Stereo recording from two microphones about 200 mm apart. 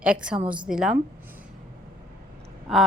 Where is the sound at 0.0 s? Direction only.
5° right (ahead or behind).